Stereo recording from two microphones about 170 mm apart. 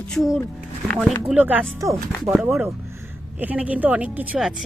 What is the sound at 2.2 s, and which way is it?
Speech, 5° right (ahead or behind).